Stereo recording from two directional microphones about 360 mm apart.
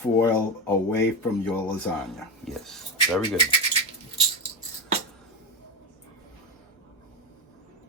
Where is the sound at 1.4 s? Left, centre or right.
Centre.